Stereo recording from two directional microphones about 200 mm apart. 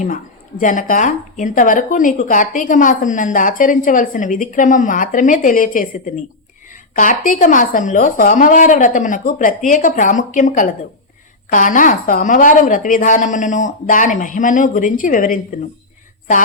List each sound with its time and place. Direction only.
0.6 s speech: 40° left (ahead or behind)
6.9 s speech: 40° left (ahead or behind)